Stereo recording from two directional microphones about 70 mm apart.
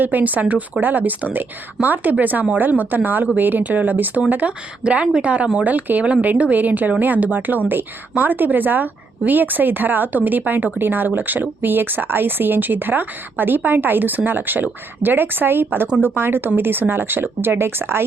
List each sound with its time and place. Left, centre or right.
0.0 s speech: right